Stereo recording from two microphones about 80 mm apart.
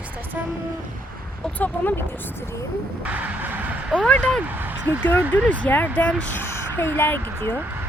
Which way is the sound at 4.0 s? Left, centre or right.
Centre.